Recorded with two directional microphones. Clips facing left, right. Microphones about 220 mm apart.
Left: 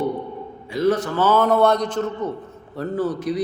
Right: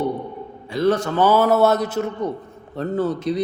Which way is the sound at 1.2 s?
10° right (ahead or behind).